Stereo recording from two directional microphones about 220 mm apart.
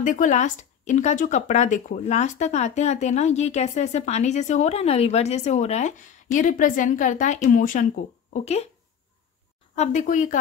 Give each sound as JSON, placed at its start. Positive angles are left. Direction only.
{"t": 0.0, "sound": "speech", "side_deg": 35}
{"t": 9.8, "sound": "speech", "side_deg": 35}